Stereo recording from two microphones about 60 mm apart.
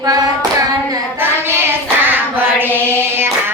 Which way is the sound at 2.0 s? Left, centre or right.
Right.